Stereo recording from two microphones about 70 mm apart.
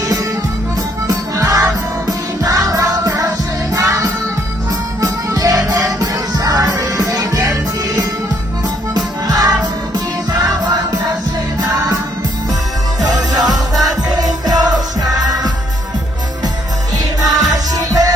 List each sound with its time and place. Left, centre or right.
0.0 s music: right
9.0 s music: right
13.0 s music: right
17.2 s music: right